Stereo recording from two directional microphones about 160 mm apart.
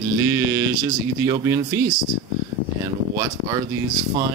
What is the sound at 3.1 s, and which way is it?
Speech, 20° right (ahead or behind).